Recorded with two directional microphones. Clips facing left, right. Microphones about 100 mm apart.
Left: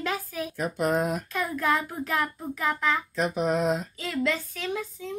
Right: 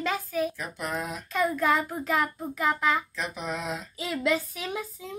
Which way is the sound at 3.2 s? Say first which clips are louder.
Left 8 dB; 45° left (ahead or behind).